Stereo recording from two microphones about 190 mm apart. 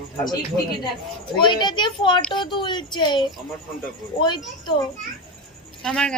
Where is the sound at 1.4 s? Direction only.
25° left (ahead or behind).